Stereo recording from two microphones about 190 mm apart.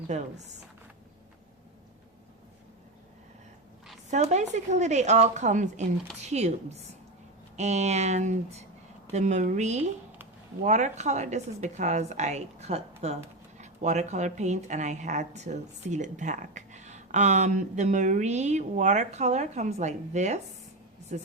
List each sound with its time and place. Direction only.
0.1 s a woman's voice: 35° right (ahead or behind)
4.1 s a woman's voice: 35° right (ahead or behind)